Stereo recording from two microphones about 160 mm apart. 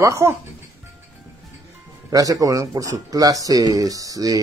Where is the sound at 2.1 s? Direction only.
20° right (ahead or behind).